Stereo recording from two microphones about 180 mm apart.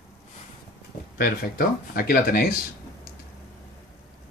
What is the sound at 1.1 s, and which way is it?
Speech, 60° left (ahead or behind).